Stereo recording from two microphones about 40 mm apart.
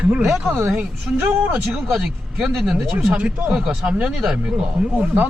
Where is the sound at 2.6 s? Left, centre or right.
Centre.